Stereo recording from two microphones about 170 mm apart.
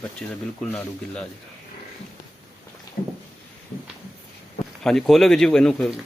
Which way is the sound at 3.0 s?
50° left (ahead or behind).